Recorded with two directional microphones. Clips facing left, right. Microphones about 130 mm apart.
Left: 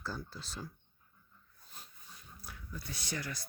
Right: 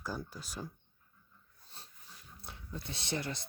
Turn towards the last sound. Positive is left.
turn(degrees=-25)  # may be behind; listen again after turning